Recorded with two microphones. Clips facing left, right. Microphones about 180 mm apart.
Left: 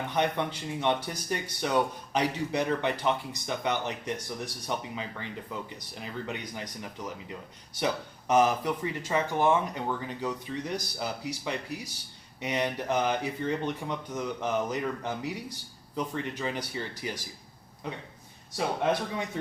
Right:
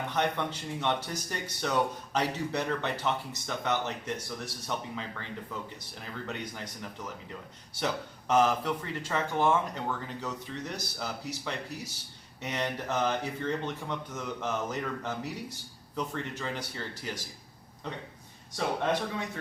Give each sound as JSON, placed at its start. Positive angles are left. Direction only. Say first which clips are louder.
{"t": 0.1, "sound": "speech", "louder": "left 2 dB", "side_deg": 15}
{"t": 8.3, "sound": "speech", "louder": "left 1 dB", "side_deg": 10}